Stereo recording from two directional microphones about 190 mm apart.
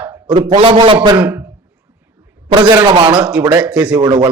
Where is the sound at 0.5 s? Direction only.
25° right (ahead or behind).